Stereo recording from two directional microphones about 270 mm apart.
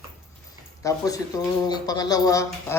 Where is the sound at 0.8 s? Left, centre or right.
Centre.